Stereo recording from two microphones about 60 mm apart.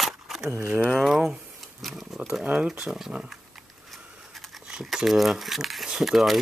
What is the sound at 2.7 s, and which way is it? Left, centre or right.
Speech, centre.